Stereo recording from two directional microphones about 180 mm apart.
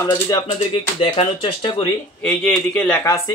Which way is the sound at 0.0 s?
20° left (ahead or behind).